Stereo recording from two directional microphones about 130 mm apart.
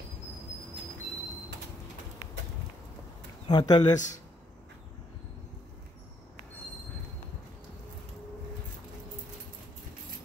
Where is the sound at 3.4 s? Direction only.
35° left (ahead or behind).